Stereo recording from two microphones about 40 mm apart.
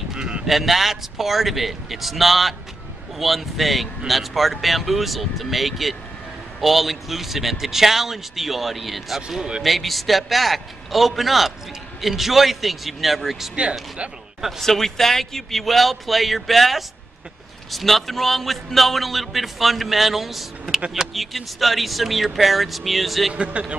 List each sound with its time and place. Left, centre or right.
0.1 s sheep: centre
0.5 s a man's voice: centre
14.6 s a man's voice: centre
23.3 s a man's voice: right